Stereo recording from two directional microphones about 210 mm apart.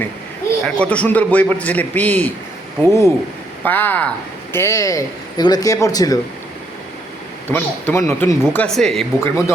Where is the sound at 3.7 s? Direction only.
10° left (ahead or behind).